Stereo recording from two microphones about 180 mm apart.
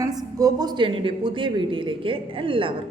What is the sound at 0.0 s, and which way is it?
A man's voice, 20° right (ahead or behind).